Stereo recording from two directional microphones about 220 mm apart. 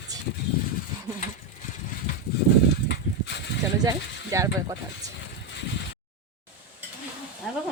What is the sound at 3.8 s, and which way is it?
Speech, 15° right (ahead or behind).